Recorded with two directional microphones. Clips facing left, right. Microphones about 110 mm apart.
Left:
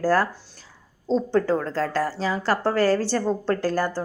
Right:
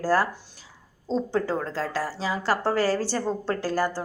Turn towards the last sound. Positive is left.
turn(degrees=-5)  # may be behind; listen again after turning